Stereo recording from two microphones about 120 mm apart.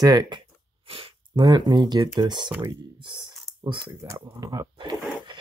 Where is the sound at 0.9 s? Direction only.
55° right (ahead or behind).